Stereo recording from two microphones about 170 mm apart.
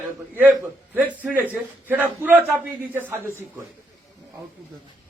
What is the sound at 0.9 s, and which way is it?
A man's voice, 10° right (ahead or behind).